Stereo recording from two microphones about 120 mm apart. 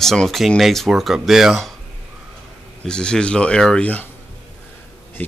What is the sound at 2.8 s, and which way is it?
Speech, 5° left (ahead or behind).